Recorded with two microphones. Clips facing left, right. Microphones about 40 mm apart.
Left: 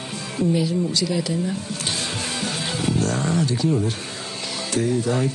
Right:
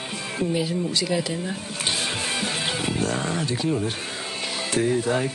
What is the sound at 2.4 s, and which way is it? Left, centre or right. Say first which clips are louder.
Music: even; centre.